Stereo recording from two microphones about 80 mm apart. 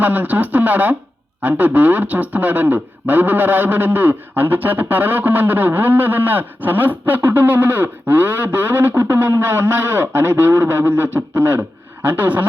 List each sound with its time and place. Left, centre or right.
0.0 s speech: right